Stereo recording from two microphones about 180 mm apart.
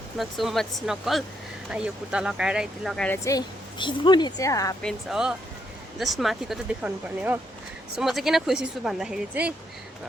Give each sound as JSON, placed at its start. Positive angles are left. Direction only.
{"t": 0.2, "sound": "speech", "side_deg": 0}
{"t": 3.2, "sound": "a woman's voice", "side_deg": 25}
{"t": 4.8, "sound": "speech", "side_deg": 0}